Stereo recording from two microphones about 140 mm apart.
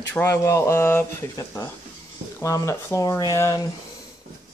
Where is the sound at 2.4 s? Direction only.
20° left (ahead or behind).